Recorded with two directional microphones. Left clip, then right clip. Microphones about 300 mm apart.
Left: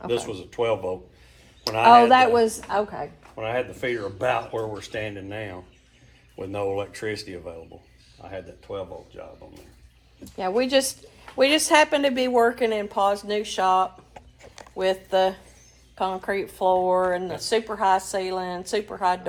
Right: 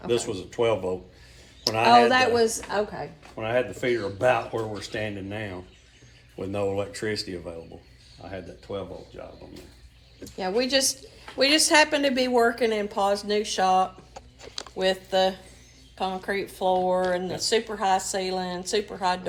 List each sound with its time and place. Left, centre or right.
0.1 s speech: centre
2.0 s speech: left
3.3 s speech: centre
10.3 s speech: left